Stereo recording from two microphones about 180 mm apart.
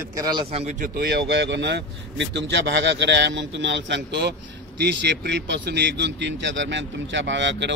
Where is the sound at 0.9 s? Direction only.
65° right (ahead or behind).